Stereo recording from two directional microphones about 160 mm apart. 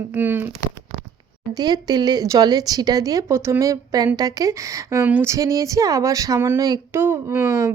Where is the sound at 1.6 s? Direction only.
25° right (ahead or behind).